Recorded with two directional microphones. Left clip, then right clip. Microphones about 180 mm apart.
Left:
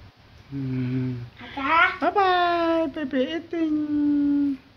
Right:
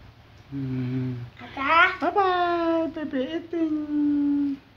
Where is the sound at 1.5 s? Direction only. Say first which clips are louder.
Right 1 dB; 35° right (ahead or behind).